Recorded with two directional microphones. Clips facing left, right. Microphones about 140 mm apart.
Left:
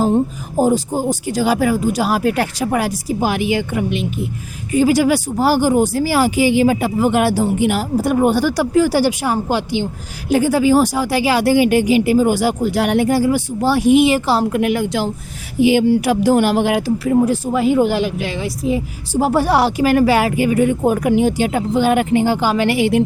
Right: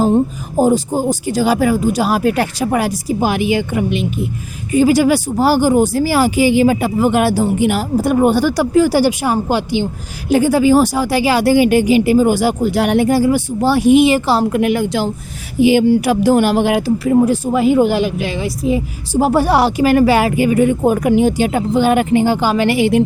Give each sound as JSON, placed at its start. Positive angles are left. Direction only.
{"t": 1.3, "sound": "speech", "side_deg": -30}
{"t": 8.0, "sound": "speech", "side_deg": -30}
{"t": 10.2, "sound": "speech", "side_deg": -25}
{"t": 15.6, "sound": "speech", "side_deg": -45}
{"t": 16.6, "sound": "speech", "side_deg": -25}